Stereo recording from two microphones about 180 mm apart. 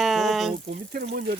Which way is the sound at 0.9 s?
55° right (ahead or behind).